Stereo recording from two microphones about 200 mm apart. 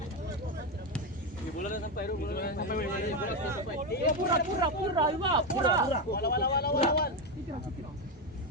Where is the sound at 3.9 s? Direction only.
55° left (ahead or behind).